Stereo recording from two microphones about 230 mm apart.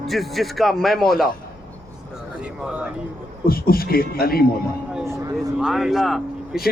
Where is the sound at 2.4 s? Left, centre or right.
Centre.